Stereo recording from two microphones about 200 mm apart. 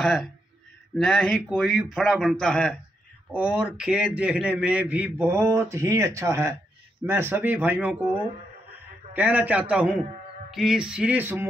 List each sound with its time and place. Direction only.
0.0 s speech: centre (ahead or behind)
3.3 s a man's voice: 5° right (ahead or behind)